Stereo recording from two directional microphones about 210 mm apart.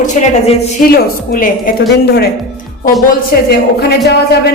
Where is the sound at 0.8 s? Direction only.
40° left (ahead or behind).